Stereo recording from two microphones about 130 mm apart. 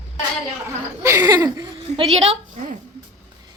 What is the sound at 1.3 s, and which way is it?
Speech, 30° right (ahead or behind).